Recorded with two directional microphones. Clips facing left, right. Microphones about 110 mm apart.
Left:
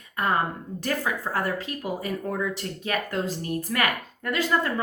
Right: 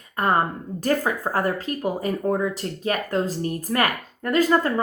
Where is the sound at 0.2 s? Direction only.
40° right (ahead or behind).